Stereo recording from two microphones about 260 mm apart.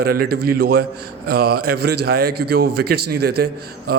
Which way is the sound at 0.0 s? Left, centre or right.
Right.